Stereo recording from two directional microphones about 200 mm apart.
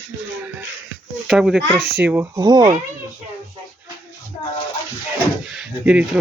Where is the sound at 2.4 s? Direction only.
20° right (ahead or behind).